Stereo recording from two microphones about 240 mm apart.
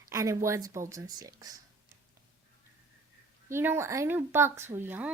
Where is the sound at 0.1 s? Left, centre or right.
Centre.